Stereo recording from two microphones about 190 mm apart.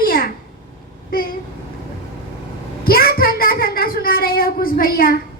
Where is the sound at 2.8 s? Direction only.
50° left (ahead or behind).